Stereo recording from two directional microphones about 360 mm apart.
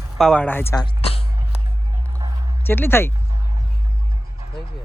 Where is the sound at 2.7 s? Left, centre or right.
Centre.